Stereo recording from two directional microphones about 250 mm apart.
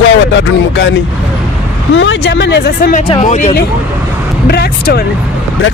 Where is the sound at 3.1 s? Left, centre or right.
Left.